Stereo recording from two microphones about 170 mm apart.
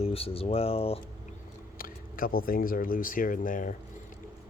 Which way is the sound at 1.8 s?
55° left (ahead or behind).